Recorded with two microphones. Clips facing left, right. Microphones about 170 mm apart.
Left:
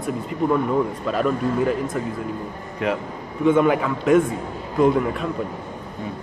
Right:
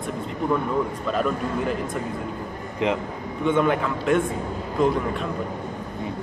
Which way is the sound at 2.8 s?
20° right (ahead or behind).